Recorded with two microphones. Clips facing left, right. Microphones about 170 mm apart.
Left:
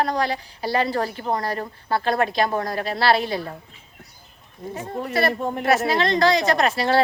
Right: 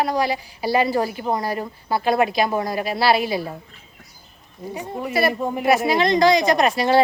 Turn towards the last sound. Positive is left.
turn(degrees=-15)  # may be behind; listen again after turning